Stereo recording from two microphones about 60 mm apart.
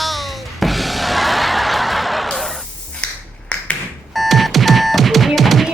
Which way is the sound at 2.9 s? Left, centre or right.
Centre.